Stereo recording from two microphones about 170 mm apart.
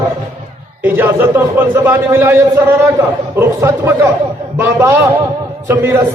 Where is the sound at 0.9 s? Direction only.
10° right (ahead or behind).